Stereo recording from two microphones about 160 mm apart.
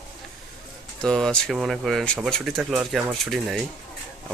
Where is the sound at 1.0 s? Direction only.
5° left (ahead or behind).